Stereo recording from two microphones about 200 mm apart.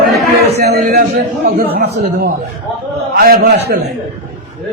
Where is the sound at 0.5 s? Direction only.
50° right (ahead or behind).